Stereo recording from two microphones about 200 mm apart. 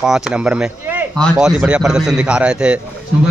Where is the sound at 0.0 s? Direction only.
5° right (ahead or behind).